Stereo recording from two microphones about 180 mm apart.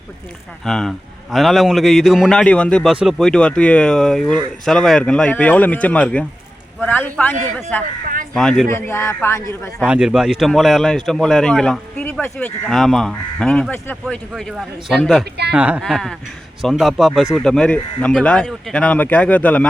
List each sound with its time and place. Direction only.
0.6 s a man's voice: 5° left (ahead or behind)
8.7 s speech: 15° left (ahead or behind)
9.8 s a man's voice: 5° right (ahead or behind)
15.2 s speech: 65° right (ahead or behind)
15.5 s a man's voice: 5° right (ahead or behind); by 19.6 s 10° left (ahead or behind)